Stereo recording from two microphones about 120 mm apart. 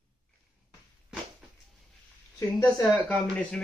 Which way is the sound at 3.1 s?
10° left (ahead or behind).